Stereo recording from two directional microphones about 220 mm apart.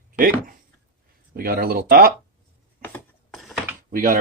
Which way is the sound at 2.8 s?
10° left (ahead or behind).